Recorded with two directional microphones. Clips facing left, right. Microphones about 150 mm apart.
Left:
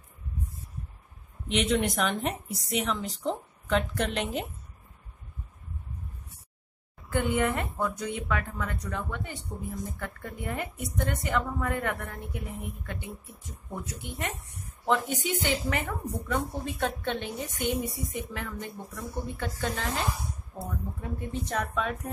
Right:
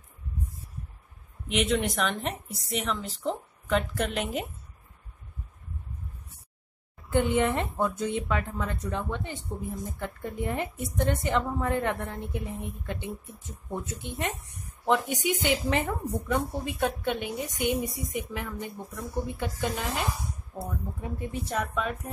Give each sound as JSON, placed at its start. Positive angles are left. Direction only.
{"t": 1.5, "sound": "a woman's voice", "side_deg": 0}
{"t": 7.1, "sound": "a woman's voice", "side_deg": -20}
{"t": 21.5, "sound": "a woman's voice", "side_deg": 0}